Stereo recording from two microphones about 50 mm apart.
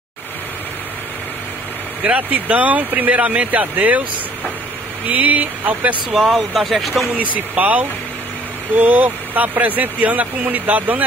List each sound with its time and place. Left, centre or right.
2.0 s speech: right
5.0 s speech: right
6.5 s speech: centre
7.3 s speech: right